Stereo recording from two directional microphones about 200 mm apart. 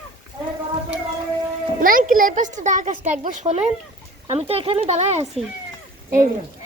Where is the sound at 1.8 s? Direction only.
45° right (ahead or behind).